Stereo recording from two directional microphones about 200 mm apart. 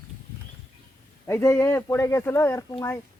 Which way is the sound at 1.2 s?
15° left (ahead or behind).